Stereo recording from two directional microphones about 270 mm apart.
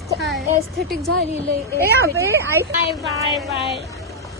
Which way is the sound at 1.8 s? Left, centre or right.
Right.